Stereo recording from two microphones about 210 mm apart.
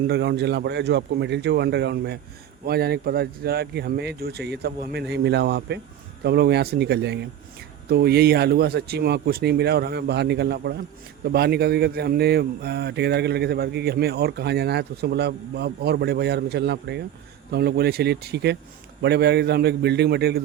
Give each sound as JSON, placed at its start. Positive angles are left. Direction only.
{"t": 0.1, "sound": "speech", "side_deg": -50}